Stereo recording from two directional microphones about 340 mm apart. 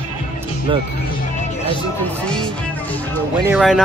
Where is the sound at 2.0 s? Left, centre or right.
Centre.